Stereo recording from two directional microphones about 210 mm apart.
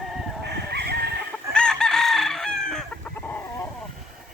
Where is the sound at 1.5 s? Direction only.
5° left (ahead or behind).